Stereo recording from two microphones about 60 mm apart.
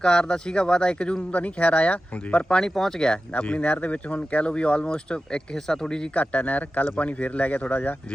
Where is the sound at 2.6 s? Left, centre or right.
Centre.